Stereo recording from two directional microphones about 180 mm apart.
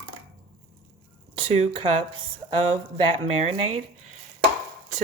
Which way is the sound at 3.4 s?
35° right (ahead or behind).